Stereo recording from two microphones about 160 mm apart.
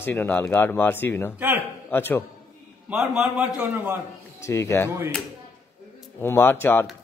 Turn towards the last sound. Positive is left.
turn(degrees=15)  # may be behind; listen again after turning